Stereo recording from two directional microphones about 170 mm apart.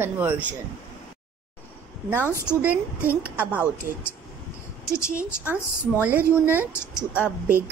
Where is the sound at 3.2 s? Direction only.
10° right (ahead or behind).